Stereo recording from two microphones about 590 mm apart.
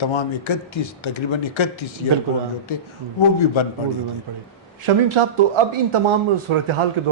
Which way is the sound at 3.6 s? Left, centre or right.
Left.